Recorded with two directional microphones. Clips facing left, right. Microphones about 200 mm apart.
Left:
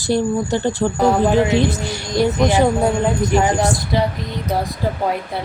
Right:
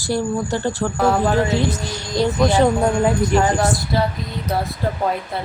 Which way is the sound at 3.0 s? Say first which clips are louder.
Even; centre (ahead or behind).